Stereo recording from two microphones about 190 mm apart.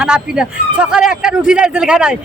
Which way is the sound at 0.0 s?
5° right (ahead or behind).